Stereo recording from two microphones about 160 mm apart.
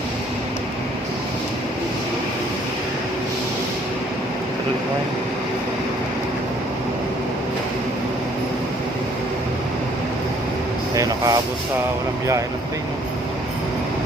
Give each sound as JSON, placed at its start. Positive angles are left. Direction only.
{"t": 10.9, "sound": "speech", "side_deg": -20}